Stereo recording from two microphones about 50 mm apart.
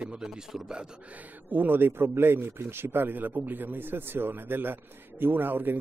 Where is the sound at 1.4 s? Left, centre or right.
Right.